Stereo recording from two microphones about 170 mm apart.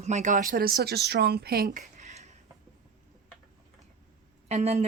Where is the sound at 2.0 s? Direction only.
40° right (ahead or behind).